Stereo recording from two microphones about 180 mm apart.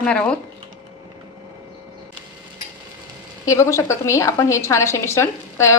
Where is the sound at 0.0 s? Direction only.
5° left (ahead or behind).